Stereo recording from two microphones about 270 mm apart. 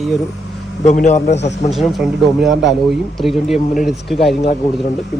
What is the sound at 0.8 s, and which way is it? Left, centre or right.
Speech, left.